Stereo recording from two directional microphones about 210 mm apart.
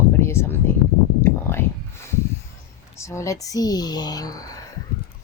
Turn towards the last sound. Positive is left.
turn(degrees=15)  # may be behind; listen again after turning